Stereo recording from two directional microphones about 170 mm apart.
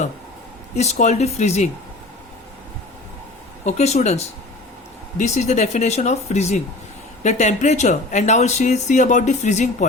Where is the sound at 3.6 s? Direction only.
40° left (ahead or behind).